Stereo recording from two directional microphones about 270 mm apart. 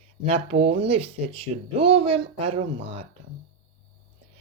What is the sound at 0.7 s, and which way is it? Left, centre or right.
Speech, right.